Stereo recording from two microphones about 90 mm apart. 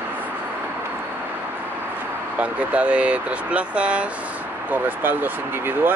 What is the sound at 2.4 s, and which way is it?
Speech, 15° right (ahead or behind).